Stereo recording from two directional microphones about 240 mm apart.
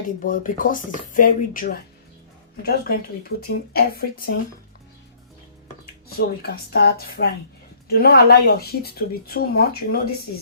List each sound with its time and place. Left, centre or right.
0.2 s speech: left
6.1 s speech: left